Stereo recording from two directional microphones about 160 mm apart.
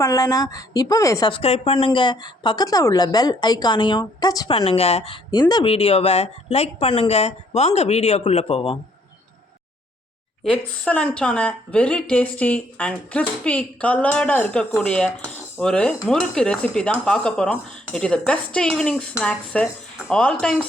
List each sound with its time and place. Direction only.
0.0 s speech: 20° left (ahead or behind)
1.3 s speech: 40° left (ahead or behind)
4.5 s speech: 40° left (ahead or behind)
10.8 s a woman's voice: 10° left (ahead or behind)